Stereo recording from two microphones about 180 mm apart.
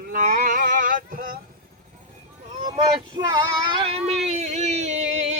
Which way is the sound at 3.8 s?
35° right (ahead or behind).